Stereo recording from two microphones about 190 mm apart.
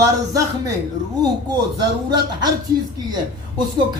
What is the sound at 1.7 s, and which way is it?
Speech, 20° right (ahead or behind).